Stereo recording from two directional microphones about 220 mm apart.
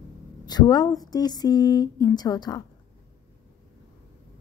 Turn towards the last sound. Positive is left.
turn(degrees=15)  # may be behind; listen again after turning